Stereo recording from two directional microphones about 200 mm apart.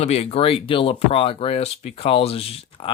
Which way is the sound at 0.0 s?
30° left (ahead or behind).